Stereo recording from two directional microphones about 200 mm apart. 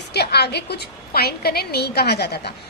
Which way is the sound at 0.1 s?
55° left (ahead or behind).